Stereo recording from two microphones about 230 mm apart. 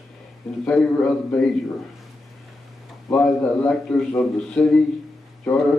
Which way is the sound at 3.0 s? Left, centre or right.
Centre.